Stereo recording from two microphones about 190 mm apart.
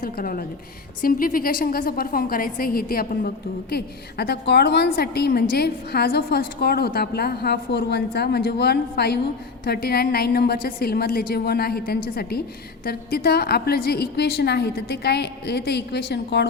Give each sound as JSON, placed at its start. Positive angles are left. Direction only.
{"t": 0.0, "sound": "a woman's voice", "side_deg": 50}